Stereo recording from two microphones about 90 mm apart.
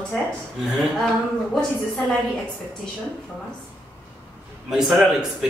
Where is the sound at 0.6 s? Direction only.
5° right (ahead or behind).